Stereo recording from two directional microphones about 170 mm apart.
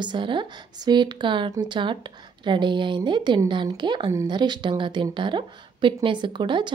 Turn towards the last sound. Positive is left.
turn(degrees=-25)  # may be behind; listen again after turning